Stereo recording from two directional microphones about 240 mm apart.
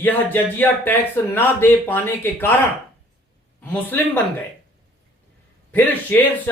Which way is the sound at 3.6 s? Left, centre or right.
Centre.